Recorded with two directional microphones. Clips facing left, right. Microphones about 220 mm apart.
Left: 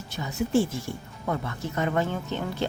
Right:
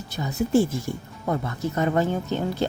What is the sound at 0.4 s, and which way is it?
Speech, 40° right (ahead or behind).